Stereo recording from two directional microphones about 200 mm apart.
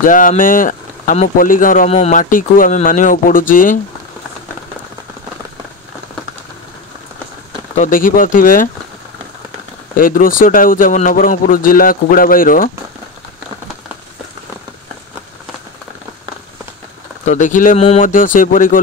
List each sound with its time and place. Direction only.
0.0 s speech: 40° left (ahead or behind)
7.7 s speech: 40° left (ahead or behind)
9.9 s speech: 45° left (ahead or behind)
17.2 s speech: 35° left (ahead or behind)